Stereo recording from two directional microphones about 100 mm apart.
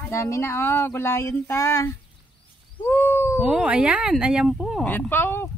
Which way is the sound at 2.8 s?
20° left (ahead or behind).